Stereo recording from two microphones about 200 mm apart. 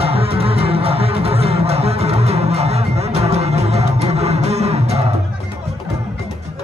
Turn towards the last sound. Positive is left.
turn(degrees=-30)  # may be behind; listen again after turning